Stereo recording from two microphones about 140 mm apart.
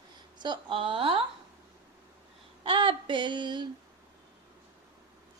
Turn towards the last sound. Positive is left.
turn(degrees=-30)  # may be behind; listen again after turning